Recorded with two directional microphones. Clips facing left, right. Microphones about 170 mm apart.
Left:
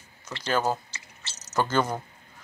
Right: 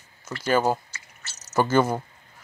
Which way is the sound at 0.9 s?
30° left (ahead or behind).